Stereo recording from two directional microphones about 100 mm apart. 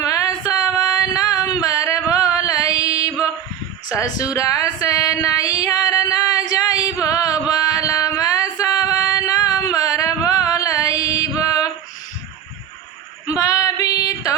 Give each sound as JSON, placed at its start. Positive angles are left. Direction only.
{"t": 0.0, "sound": "female singing", "side_deg": 35}
{"t": 3.8, "sound": "speech", "side_deg": 40}
{"t": 4.4, "sound": "music", "side_deg": 35}
{"t": 7.0, "sound": "a sound", "side_deg": 35}
{"t": 10.4, "sound": "music", "side_deg": 35}
{"t": 13.2, "sound": "female singing", "side_deg": 35}